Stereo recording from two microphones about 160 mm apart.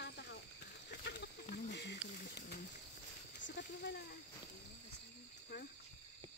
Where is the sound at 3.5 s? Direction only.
90° left.